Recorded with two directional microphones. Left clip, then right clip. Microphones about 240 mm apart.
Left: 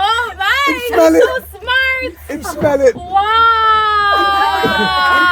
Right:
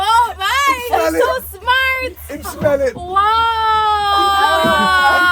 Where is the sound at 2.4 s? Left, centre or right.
Left.